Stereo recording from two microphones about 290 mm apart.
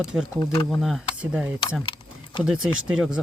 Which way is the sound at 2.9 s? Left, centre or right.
Centre.